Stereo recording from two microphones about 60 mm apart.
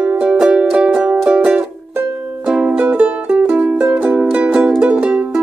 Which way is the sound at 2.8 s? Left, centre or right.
Right.